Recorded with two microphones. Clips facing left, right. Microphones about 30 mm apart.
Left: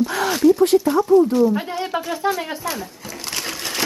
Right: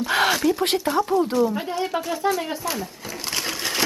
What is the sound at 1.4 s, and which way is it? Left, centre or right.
Speech, centre.